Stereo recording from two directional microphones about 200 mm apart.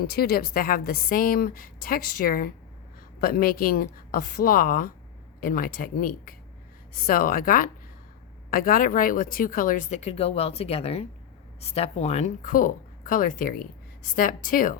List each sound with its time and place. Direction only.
0.0 s a woman's voice: 50° left (ahead or behind)